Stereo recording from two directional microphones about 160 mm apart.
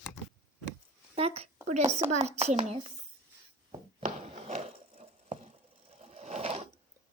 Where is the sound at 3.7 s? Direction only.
45° right (ahead or behind).